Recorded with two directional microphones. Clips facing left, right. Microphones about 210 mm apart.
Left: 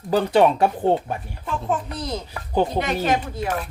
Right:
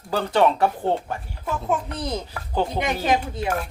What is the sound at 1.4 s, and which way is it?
Speech, 15° right (ahead or behind).